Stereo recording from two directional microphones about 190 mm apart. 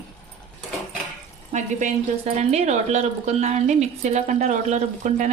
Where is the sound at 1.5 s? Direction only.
35° right (ahead or behind).